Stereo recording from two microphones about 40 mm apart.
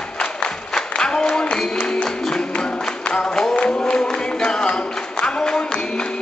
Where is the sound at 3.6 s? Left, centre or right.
Left.